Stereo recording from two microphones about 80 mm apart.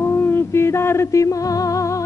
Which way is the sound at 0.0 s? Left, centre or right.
Left.